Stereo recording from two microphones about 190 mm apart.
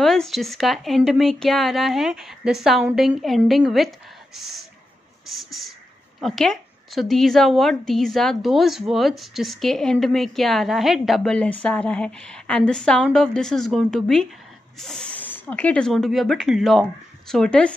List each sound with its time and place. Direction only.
0.0 s a woman's voice: centre (ahead or behind)
5.3 s a woman's voice: centre (ahead or behind)